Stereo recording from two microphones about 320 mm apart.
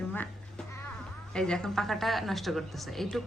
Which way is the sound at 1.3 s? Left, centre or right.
Centre.